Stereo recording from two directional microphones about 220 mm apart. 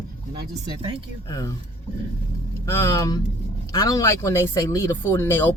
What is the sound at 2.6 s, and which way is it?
Speech, 15° left (ahead or behind).